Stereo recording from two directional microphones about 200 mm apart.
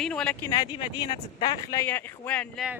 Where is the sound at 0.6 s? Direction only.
20° left (ahead or behind).